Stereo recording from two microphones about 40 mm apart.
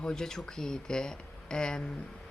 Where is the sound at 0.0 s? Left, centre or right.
Centre.